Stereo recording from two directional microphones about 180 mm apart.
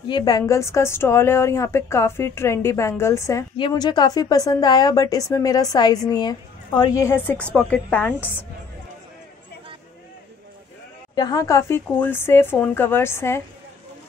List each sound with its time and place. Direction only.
0.1 s a woman's voice: 20° left (ahead or behind)
11.1 s a woman's voice: 20° left (ahead or behind)